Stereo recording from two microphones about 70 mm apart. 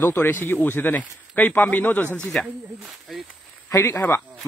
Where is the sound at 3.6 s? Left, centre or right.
Left.